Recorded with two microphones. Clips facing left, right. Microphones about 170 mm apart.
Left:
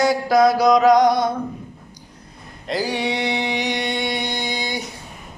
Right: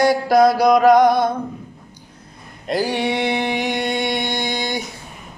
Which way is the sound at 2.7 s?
55° right (ahead or behind).